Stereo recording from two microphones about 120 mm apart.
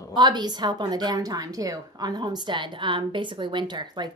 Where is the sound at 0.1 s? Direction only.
35° right (ahead or behind).